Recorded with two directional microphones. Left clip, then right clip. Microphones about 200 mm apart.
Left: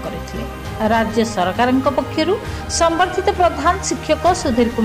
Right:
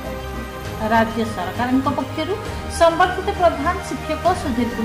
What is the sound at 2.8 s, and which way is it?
Speech, 45° left (ahead or behind).